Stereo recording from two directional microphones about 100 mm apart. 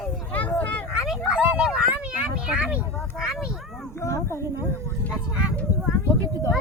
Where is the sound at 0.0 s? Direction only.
15° left (ahead or behind).